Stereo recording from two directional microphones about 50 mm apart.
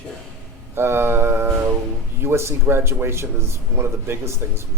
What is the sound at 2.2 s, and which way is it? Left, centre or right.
Speech, right.